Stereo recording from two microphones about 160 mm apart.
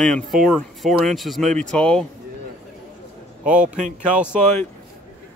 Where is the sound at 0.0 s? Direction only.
Centre (ahead or behind).